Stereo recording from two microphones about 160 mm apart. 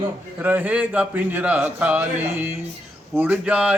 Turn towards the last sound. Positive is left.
turn(degrees=-10)  # may be behind; listen again after turning